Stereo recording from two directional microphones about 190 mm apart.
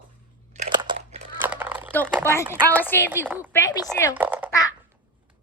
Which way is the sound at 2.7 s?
10° left (ahead or behind).